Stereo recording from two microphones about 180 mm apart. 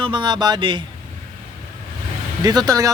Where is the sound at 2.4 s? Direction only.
20° right (ahead or behind).